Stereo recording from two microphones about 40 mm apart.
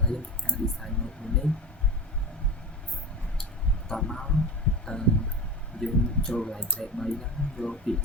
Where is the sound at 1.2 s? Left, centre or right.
Left.